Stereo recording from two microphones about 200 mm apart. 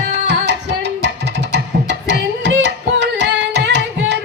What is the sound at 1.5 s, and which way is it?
Carnatic music, 60° right (ahead or behind).